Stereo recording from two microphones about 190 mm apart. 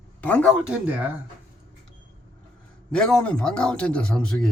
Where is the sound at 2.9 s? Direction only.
5° left (ahead or behind).